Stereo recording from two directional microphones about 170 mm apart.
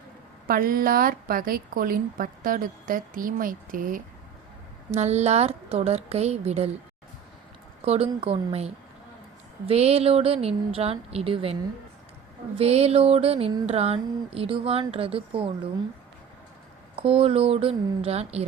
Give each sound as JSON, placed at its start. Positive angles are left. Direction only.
{"t": 0.4, "sound": "a woman's voice", "side_deg": -60}
{"t": 4.9, "sound": "speech", "side_deg": -40}
{"t": 7.9, "sound": "speech", "side_deg": -35}
{"t": 12.5, "sound": "speech", "side_deg": -35}
{"t": 16.9, "sound": "speech", "side_deg": -35}